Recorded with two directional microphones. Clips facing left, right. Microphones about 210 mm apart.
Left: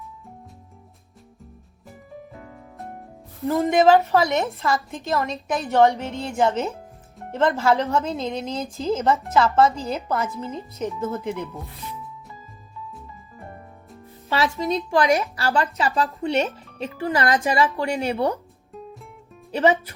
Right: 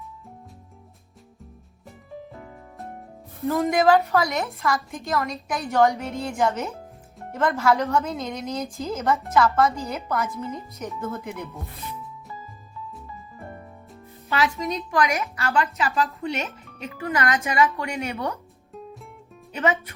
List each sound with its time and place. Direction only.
3.5 s a woman's voice: 30° left (ahead or behind)
14.3 s a woman's voice: 30° left (ahead or behind)
19.5 s speech: 30° left (ahead or behind)